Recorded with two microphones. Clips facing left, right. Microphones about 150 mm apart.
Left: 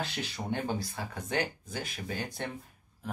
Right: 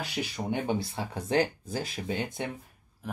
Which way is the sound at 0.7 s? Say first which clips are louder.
Right 4 dB; 25° right (ahead or behind).